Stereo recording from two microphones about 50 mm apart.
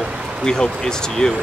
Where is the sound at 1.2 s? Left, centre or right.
Centre.